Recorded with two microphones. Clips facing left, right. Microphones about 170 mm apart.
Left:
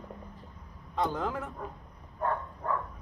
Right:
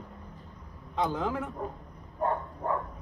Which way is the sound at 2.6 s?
30° right (ahead or behind).